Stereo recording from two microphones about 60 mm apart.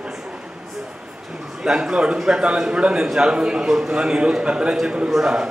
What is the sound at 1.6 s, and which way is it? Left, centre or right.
A man's voice, centre.